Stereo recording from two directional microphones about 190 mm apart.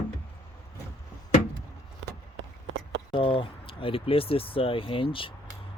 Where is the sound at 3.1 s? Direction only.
30° left (ahead or behind).